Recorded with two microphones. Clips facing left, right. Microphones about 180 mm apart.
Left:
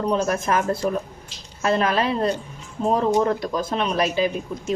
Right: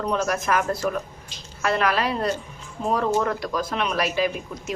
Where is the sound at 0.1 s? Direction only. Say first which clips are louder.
Left 1 dB; 30° left (ahead or behind).